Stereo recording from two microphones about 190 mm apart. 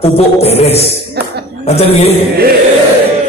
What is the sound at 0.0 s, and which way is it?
Speech, 35° left (ahead or behind).